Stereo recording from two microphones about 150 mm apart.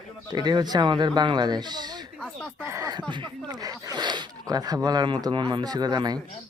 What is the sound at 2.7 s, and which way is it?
Speech, 25° right (ahead or behind).